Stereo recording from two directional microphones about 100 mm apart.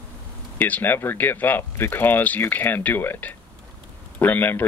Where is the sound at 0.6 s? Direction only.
20° left (ahead or behind).